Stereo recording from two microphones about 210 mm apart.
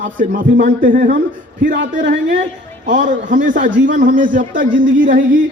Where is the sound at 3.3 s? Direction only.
40° right (ahead or behind).